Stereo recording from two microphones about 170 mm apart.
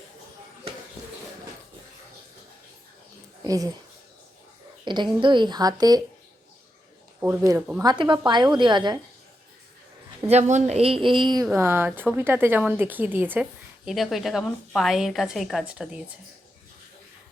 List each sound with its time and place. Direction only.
3.4 s speech: 20° right (ahead or behind)
4.9 s a woman's voice: 25° right (ahead or behind)
7.2 s a woman's voice: 15° right (ahead or behind)
10.5 s a woman's voice: 40° right (ahead or behind)
11.5 s a woman's voice: 15° right (ahead or behind)